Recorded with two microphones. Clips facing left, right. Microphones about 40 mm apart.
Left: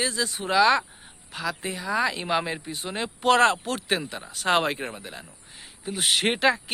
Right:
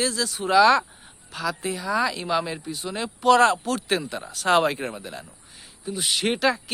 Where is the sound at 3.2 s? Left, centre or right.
Left.